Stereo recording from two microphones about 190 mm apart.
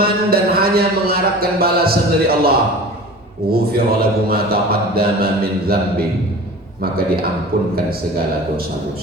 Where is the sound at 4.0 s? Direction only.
50° right (ahead or behind).